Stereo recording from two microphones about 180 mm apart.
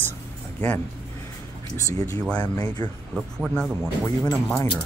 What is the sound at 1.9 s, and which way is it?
Speech, 20° left (ahead or behind).